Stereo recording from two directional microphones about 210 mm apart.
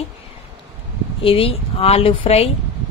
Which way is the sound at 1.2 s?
25° left (ahead or behind).